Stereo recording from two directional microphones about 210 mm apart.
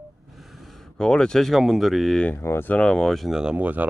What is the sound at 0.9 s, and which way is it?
Speech, 5° left (ahead or behind).